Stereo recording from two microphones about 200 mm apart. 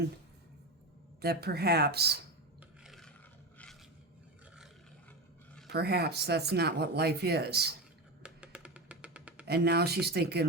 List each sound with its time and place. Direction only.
1.2 s speech: 50° right (ahead or behind)
2.8 s filing: centre (ahead or behind)
5.6 s speech: 55° right (ahead or behind)
8.2 s music: 5° right (ahead or behind)
9.5 s speech: 55° right (ahead or behind)